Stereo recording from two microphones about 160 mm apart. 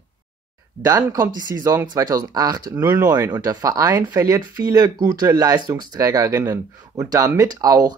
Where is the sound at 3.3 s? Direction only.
25° right (ahead or behind).